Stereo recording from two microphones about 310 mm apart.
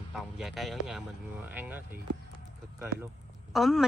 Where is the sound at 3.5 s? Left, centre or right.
Centre.